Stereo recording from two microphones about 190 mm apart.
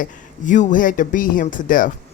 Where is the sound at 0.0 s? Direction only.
40° left (ahead or behind).